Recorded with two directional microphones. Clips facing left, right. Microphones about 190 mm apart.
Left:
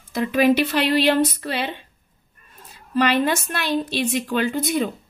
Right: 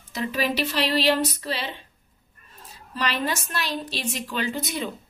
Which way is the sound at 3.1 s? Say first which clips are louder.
Left 7 dB; 55° left (ahead or behind).